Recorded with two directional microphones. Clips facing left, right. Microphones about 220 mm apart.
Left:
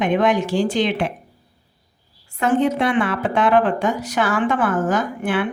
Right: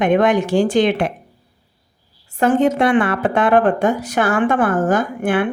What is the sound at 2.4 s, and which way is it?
A woman's voice, 45° right (ahead or behind).